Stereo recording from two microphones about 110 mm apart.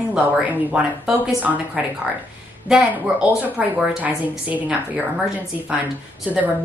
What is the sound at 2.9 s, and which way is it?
Speech, 15° right (ahead or behind).